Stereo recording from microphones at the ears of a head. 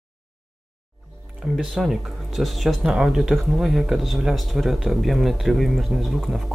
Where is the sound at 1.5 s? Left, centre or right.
Centre.